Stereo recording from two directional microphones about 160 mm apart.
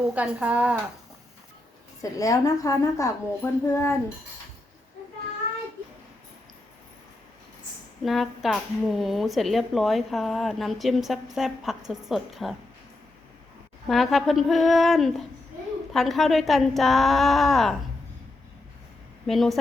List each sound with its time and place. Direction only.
0.1 s speech: 10° right (ahead or behind)
2.0 s a woman's voice: 20° left (ahead or behind)
8.0 s a woman's voice: centre (ahead or behind)
13.8 s a woman's voice: centre (ahead or behind)
19.3 s a woman's voice: centre (ahead or behind)